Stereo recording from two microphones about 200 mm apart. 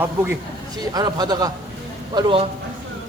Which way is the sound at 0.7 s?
20° right (ahead or behind).